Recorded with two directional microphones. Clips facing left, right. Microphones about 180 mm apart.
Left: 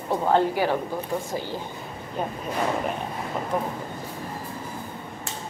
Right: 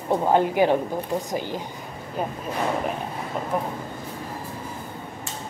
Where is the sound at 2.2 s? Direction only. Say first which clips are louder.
Right 1 dB; 5° right (ahead or behind).